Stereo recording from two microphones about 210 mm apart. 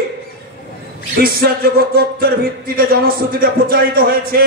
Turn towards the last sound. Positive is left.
turn(degrees=-45)  # may be behind; listen again after turning